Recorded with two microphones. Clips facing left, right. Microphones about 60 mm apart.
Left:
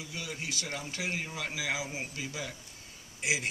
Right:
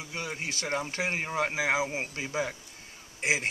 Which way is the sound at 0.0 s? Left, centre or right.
Right.